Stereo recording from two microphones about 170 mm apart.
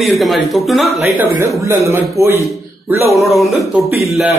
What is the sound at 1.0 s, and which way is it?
A man's voice, 15° right (ahead or behind).